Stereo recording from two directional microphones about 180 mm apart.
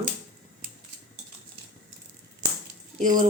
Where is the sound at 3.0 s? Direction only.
45° right (ahead or behind).